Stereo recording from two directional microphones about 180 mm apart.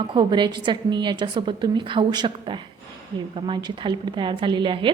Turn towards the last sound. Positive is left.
turn(degrees=-25)  # may be behind; listen again after turning